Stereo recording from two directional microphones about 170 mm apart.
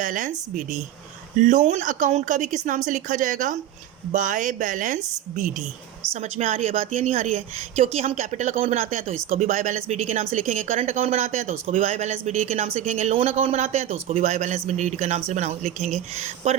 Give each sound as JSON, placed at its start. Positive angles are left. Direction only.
{"t": 0.0, "sound": "a woman's voice", "side_deg": -50}
{"t": 6.1, "sound": "speech", "side_deg": -35}